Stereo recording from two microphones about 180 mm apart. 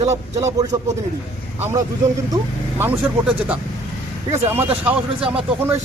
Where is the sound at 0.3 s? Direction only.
20° right (ahead or behind).